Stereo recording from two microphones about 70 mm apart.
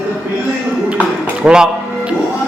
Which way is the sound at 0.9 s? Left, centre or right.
Centre.